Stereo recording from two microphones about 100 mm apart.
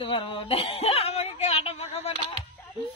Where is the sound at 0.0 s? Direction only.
60° left (ahead or behind); by 2.1 s 90° left.